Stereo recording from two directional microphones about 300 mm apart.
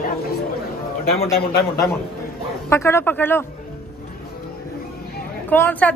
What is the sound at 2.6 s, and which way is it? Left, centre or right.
Speech, centre.